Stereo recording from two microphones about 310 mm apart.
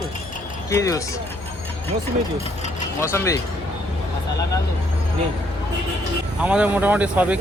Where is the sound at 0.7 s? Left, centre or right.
Centre.